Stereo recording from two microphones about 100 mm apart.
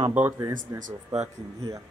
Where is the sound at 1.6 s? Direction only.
35° right (ahead or behind).